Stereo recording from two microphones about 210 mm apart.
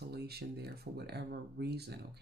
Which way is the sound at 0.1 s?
50° right (ahead or behind).